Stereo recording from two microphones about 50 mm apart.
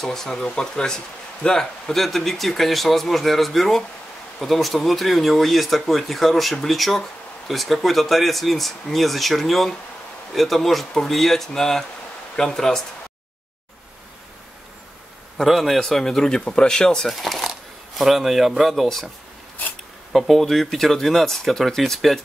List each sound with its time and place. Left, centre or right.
0.0 s speech: centre
15.3 s speech: centre
17.1 s speech: centre
20.1 s speech: centre